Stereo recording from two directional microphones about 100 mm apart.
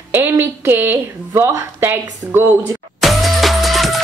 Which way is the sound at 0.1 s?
20° right (ahead or behind).